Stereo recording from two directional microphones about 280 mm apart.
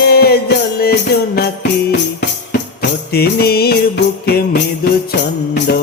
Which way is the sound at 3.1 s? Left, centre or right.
Left.